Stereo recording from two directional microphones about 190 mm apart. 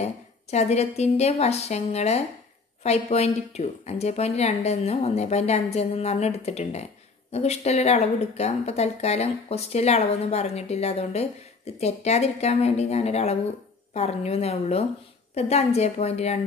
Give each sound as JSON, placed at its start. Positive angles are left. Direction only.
{"t": 0.0, "sound": "a woman's voice", "side_deg": 35}